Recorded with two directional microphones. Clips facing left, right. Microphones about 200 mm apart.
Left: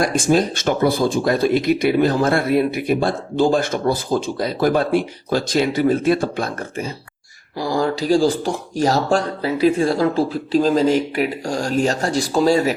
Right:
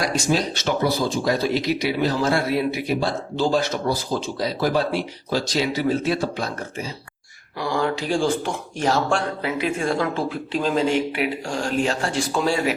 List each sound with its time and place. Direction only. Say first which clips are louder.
0.0 s speech: left 5 dB; 50° left (ahead or behind)
7.6 s speech: left 3 dB; 35° left (ahead or behind)